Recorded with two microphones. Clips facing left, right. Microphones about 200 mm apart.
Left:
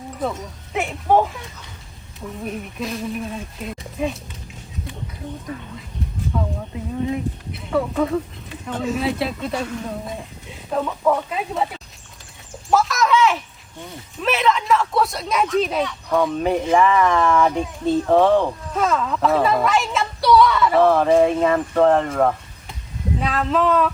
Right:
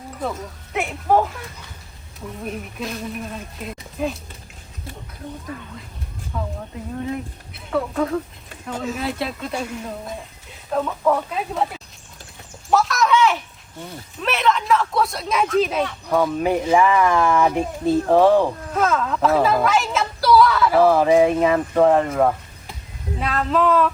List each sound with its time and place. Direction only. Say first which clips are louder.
0.2 s speech: left 1 dB; centre (ahead or behind)
2.4 s speech: left 1 dB; centre (ahead or behind)
6.3 s a sound: left 3 dB; centre (ahead or behind)
7.0 s speech: left 5 dB; centre (ahead or behind)
10.7 s speech: even; centre (ahead or behind)